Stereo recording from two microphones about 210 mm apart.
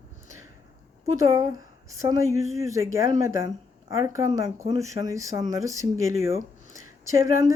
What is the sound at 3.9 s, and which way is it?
Speech, 15° right (ahead or behind).